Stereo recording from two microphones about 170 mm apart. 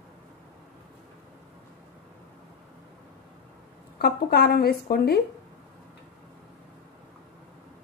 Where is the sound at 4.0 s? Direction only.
70° left (ahead or behind).